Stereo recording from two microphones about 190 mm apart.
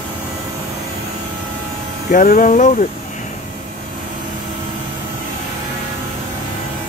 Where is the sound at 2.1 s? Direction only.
45° left (ahead or behind).